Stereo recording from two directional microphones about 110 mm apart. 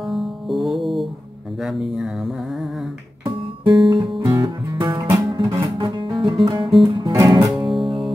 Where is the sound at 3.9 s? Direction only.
50° right (ahead or behind).